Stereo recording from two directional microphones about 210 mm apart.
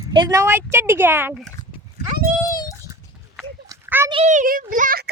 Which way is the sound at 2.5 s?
15° left (ahead or behind).